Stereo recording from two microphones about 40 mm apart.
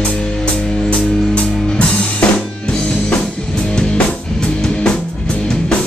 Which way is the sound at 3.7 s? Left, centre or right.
Centre.